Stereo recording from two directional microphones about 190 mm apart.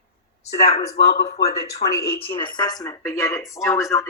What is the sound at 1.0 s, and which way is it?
Speech, 60° left (ahead or behind).